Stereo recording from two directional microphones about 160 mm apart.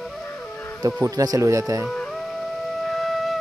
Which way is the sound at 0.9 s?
20° right (ahead or behind).